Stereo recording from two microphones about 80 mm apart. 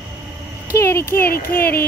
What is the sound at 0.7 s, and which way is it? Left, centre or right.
Speech, left.